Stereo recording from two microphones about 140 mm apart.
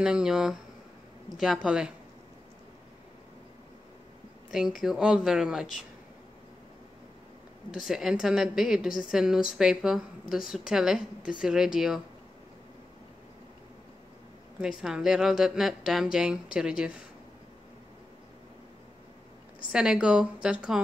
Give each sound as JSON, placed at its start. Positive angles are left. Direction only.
{"t": 0.0, "sound": "a woman's voice", "side_deg": -5}
{"t": 4.5, "sound": "a woman's voice", "side_deg": -5}
{"t": 7.7, "sound": "a woman's voice", "side_deg": 0}
{"t": 14.6, "sound": "a woman's voice", "side_deg": -5}
{"t": 19.7, "sound": "a woman's voice", "side_deg": -5}